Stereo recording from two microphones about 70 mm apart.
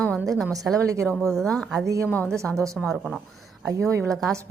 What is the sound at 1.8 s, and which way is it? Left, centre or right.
Speech, right.